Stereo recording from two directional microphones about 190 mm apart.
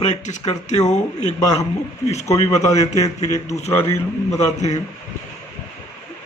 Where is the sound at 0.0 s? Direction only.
35° left (ahead or behind).